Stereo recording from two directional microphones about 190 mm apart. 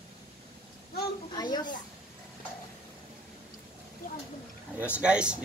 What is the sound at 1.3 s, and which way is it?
Speech, 20° left (ahead or behind).